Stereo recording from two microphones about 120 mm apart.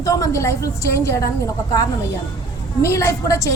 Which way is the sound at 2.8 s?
20° left (ahead or behind).